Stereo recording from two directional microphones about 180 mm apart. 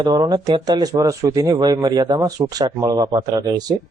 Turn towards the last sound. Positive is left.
turn(degrees=-20)  # may be behind; listen again after turning